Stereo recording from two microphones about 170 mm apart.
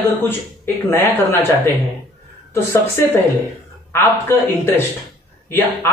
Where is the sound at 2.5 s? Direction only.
15° left (ahead or behind).